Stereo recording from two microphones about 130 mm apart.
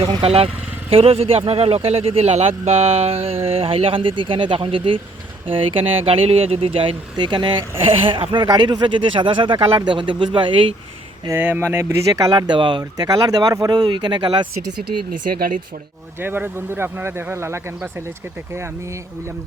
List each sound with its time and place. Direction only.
0.2 s speech: 50° right (ahead or behind)
11.3 s speech: 15° right (ahead or behind)
12.4 s speech: 35° right (ahead or behind)
15.1 s speech: 90° right
16.2 s speech: 15° right (ahead or behind)